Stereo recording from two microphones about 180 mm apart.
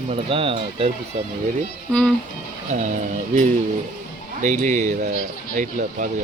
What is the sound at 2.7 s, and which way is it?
Speech, 45° right (ahead or behind).